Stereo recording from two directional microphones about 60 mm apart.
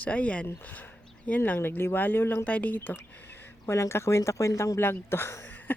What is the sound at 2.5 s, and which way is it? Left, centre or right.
Speech, left.